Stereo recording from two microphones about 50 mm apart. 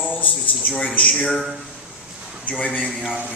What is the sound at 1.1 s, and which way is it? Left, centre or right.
Speech, left.